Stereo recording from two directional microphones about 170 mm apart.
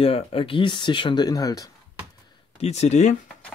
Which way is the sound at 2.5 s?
40° left (ahead or behind).